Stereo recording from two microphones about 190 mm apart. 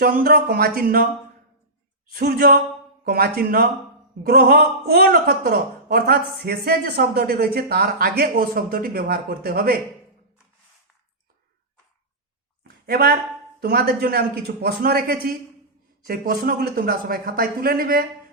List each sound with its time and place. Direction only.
0.0 s a man's voice: 50° right (ahead or behind)
2.1 s a man's voice: 55° right (ahead or behind)
12.6 s a sound: 55° right (ahead or behind)
13.6 s a man's voice: 55° right (ahead or behind)